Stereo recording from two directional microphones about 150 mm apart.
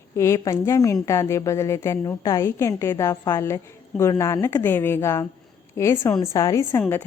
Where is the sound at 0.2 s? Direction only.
20° left (ahead or behind).